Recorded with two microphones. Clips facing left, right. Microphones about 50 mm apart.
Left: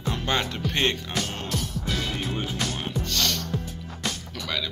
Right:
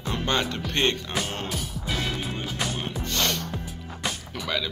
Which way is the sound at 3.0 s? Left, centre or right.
Right.